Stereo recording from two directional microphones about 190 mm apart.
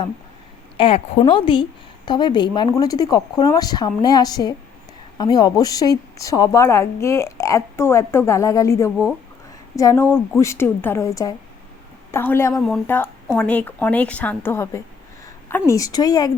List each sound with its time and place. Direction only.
0.8 s a woman's voice: 30° left (ahead or behind); by 12.6 s 15° left (ahead or behind)
12.6 s a woman's voice: centre (ahead or behind); by 16.3 s 20° left (ahead or behind)